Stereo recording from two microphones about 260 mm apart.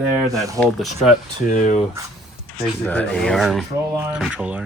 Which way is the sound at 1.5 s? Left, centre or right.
Left.